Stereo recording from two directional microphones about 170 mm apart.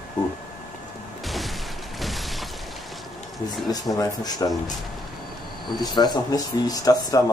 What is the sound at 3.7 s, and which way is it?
Speech, 20° left (ahead or behind).